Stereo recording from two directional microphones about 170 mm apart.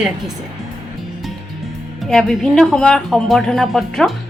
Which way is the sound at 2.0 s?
Centre (ahead or behind).